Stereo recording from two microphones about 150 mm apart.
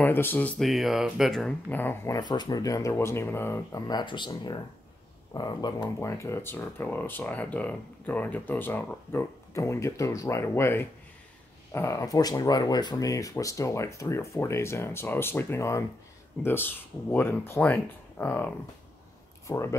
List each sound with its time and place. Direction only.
0.0 s speech: 15° left (ahead or behind)
1.8 s speech: 15° left (ahead or behind)
2.1 s speech: 30° left (ahead or behind)